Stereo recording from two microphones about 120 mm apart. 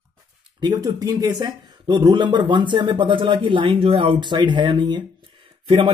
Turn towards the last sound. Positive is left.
turn(degrees=-45)  # may be behind; listen again after turning